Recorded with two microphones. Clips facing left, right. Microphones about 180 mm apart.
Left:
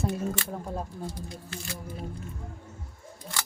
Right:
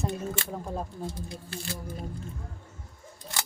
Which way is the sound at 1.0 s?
30° right (ahead or behind).